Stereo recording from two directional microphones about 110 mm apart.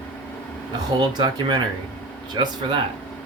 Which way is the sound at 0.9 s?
40° right (ahead or behind).